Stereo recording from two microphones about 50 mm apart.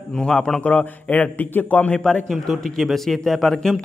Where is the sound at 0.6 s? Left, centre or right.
Left.